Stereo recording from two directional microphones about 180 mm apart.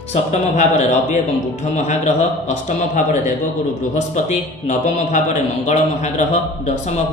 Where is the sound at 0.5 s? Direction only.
40° left (ahead or behind).